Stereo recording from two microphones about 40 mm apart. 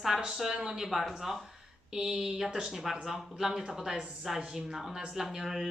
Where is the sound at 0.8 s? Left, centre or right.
Centre.